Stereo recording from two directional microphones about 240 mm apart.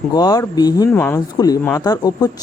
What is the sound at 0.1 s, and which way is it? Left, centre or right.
Speech, centre.